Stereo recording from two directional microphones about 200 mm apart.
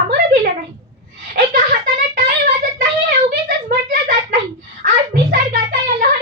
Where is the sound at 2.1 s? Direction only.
40° right (ahead or behind).